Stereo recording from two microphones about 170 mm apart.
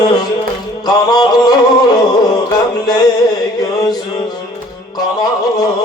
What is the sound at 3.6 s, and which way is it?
Music, 20° left (ahead or behind).